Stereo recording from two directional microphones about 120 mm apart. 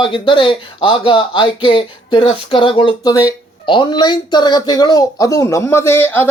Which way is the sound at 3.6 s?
45° left (ahead or behind).